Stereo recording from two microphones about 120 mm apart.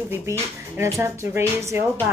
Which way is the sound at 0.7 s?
25° right (ahead or behind).